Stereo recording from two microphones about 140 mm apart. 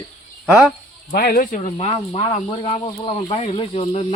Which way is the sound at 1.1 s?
90° left.